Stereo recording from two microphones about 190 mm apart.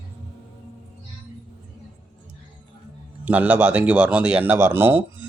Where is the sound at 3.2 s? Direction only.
10° right (ahead or behind).